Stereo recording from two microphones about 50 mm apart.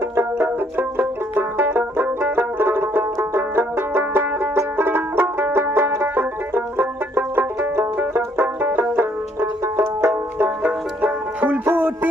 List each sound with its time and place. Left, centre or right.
0.2 s music: right
9.0 s banjo: right
10.6 s banjo: right
11.6 s music: right